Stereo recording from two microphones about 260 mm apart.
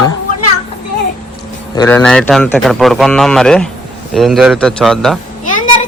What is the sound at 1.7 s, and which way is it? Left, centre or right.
A man's voice, centre.